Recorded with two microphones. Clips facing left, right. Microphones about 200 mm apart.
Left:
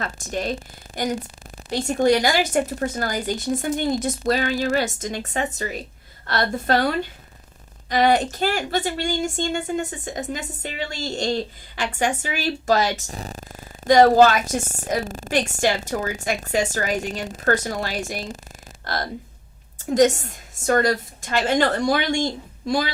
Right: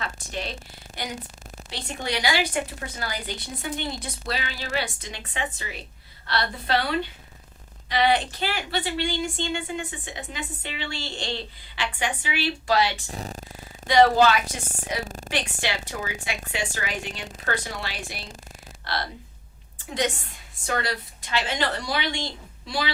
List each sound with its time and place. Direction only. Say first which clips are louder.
0.0 s a woman's voice: left 6 dB; 45° left (ahead or behind)
15.0 s a woman's voice: left 5 dB; centre (ahead or behind)
15.3 s a woman's voice: left 9 dB; 45° left (ahead or behind)